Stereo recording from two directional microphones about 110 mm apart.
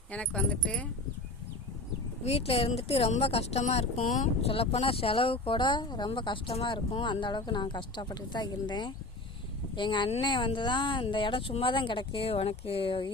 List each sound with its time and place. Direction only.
0.1 s speech: 10° left (ahead or behind)
2.2 s a woman's voice: 65° left (ahead or behind)